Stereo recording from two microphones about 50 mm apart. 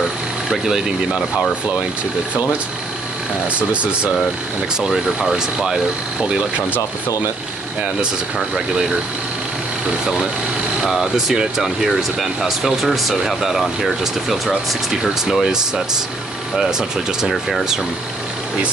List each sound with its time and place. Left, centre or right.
0.5 s speech: centre
3.5 s speech: right
4.7 s speech: centre
10.9 s speech: centre
17.2 s speech: centre